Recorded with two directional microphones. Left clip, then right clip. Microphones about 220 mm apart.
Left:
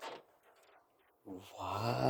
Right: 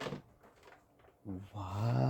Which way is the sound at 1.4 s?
45° left (ahead or behind).